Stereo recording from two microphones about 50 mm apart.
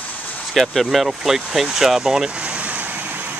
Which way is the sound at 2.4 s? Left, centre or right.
Right.